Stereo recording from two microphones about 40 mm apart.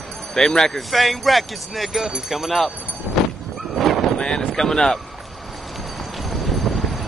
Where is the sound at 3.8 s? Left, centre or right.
Centre.